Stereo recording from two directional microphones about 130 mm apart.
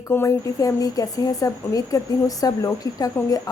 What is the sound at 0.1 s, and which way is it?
Speech, 20° left (ahead or behind).